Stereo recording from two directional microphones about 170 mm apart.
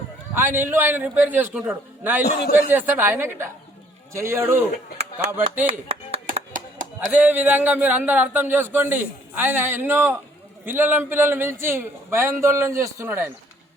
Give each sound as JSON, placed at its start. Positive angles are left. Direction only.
{"t": 0.3, "sound": "speech", "side_deg": -10}
{"t": 2.2, "sound": "a man's voice", "side_deg": 65}
{"t": 2.6, "sound": "speech", "side_deg": -10}
{"t": 4.9, "sound": "speech", "side_deg": -40}
{"t": 6.5, "sound": "chop", "side_deg": -50}
{"t": 7.1, "sound": "speech", "side_deg": -10}